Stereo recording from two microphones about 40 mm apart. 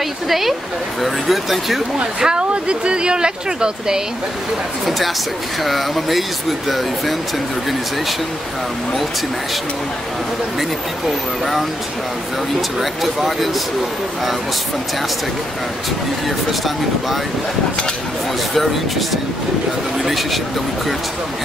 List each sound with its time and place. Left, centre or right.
0.3 s speech: centre
2.0 s speech: right
4.8 s speech: centre
13.0 s speech: centre
16.3 s speech: centre
18.5 s speech: centre